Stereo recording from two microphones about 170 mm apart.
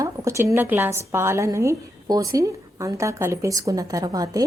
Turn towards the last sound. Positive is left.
turn(degrees=-20)  # may be behind; listen again after turning